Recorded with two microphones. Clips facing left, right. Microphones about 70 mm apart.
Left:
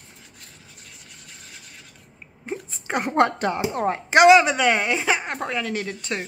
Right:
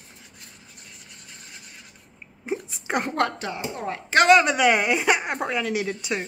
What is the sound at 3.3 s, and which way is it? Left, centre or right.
Speech, left.